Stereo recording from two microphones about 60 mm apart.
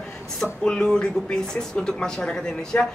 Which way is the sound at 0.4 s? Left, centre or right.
Centre.